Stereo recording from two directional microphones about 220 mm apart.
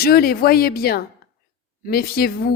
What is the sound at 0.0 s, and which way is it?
Speech, 45° left (ahead or behind).